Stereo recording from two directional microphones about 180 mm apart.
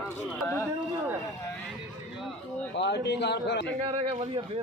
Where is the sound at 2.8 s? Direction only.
70° left (ahead or behind).